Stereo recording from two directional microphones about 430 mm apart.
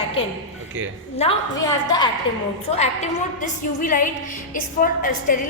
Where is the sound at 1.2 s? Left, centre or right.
Centre.